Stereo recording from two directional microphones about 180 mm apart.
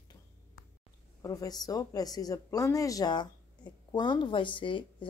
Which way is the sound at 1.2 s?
20° left (ahead or behind).